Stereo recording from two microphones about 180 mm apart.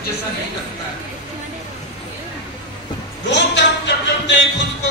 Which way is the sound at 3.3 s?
75° left (ahead or behind).